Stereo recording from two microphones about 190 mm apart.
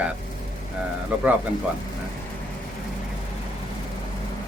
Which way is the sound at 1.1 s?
10° right (ahead or behind).